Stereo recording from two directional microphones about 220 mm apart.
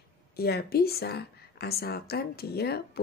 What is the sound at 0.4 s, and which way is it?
A woman's voice, 45° left (ahead or behind).